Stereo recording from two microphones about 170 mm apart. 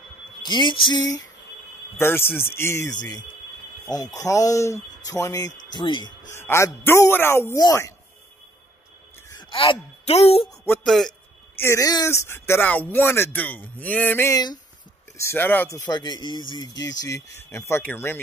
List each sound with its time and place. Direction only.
0.5 s speech: 25° left (ahead or behind)
2.0 s speech: 15° left (ahead or behind)
6.3 s speech: 15° left (ahead or behind)
9.3 s speech: 30° left (ahead or behind)
10.6 s speech: 15° left (ahead or behind)
10.9 s a man's voice: centre (ahead or behind)
11.5 s speech: 15° left (ahead or behind)
15.9 s speech: 25° left (ahead or behind)